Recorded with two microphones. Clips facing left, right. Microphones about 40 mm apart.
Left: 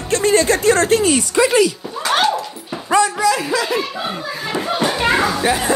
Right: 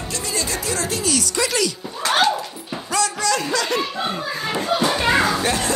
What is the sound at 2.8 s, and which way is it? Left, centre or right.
Dog, left.